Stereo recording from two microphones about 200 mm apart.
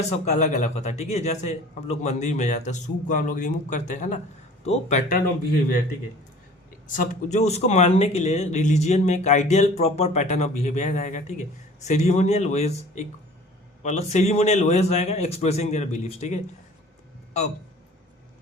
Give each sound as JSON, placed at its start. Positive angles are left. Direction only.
{"t": 0.1, "sound": "speech", "side_deg": 35}
{"t": 6.9, "sound": "speech", "side_deg": 40}